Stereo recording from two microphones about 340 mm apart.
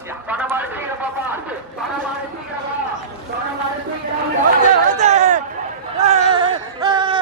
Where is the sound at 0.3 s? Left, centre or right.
Centre.